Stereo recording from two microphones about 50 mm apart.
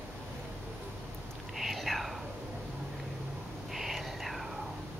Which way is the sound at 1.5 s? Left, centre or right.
Centre.